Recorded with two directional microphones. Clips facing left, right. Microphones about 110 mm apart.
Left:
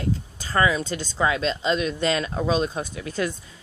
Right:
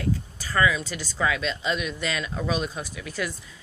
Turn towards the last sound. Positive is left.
turn(degrees=30)  # may be behind; listen again after turning